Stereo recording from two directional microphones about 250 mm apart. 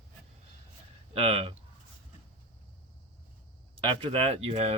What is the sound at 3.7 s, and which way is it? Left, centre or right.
Speech, right.